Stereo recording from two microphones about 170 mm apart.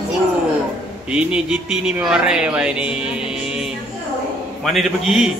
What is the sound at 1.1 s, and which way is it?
Speech, 5° right (ahead or behind).